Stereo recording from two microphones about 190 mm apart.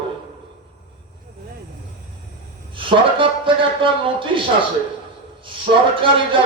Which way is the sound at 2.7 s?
25° right (ahead or behind).